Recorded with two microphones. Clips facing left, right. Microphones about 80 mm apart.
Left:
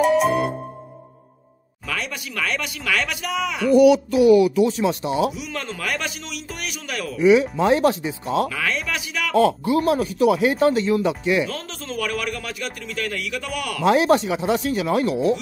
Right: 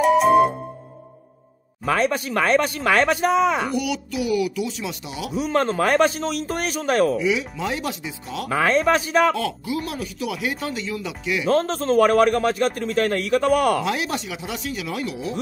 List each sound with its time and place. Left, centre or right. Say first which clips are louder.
0.0 s music: right 3 dB; centre
1.9 s a man's voice: right 9 dB; right
3.7 s speech: left 11 dB; left
5.3 s a man's voice: right 9 dB; right
7.2 s speech: left 7 dB; left
8.5 s a man's voice: right 7 dB; right
9.4 s speech: left 8 dB; left
11.4 s a man's voice: right 11 dB; right
13.8 s speech: left 9 dB; left